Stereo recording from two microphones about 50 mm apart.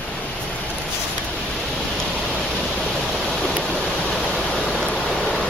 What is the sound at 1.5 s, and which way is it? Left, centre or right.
Pink noise, centre.